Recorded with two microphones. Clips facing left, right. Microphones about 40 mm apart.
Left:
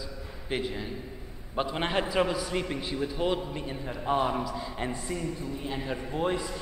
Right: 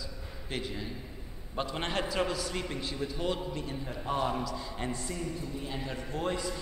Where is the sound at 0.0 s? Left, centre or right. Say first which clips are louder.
Left 3 dB; centre.